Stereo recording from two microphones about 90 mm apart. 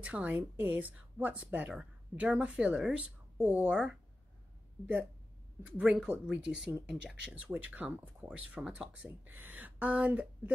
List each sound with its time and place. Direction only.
0.0 s speech: 15° right (ahead or behind)
5.6 s speech: 15° right (ahead or behind)